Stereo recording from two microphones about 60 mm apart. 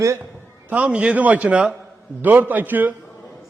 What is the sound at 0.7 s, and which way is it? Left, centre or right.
A man's voice, centre.